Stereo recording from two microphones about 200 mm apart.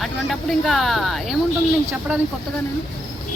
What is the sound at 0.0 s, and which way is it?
Speech, centre (ahead or behind).